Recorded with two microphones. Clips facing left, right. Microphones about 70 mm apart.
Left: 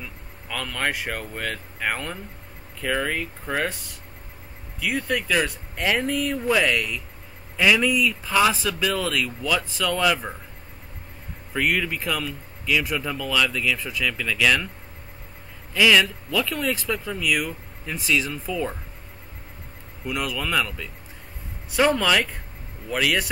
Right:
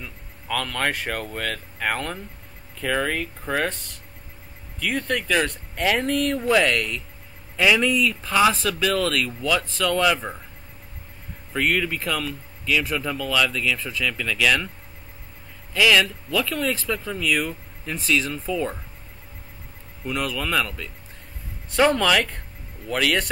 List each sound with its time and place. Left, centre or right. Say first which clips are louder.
0.5 s speech: right 2 dB; centre
4.7 s speech: even; centre
10.0 s speech: left 2 dB; centre
11.5 s speech: right 1 dB; centre
15.7 s speech: even; centre
16.5 s speech: right 1 dB; centre
16.8 s speech: even; centre
20.1 s speech: right 1 dB; centre